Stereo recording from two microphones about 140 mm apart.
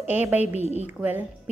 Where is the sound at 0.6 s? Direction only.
50° right (ahead or behind).